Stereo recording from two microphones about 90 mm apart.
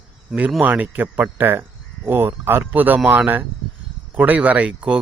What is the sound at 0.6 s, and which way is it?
Speech, 20° right (ahead or behind).